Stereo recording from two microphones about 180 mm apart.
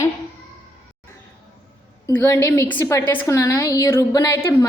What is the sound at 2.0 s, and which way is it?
A woman's voice, 15° left (ahead or behind).